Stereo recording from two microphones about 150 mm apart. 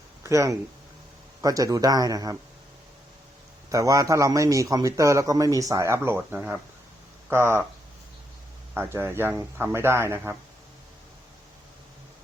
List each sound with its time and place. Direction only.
0.2 s a man's voice: 20° right (ahead or behind)
3.7 s a man's voice: 20° right (ahead or behind)
8.7 s speech: 15° right (ahead or behind)